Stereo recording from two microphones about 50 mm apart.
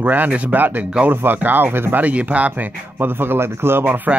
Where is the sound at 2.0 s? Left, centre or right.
Right.